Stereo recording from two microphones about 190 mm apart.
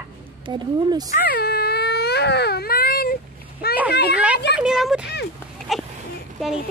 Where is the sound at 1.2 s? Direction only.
55° left (ahead or behind).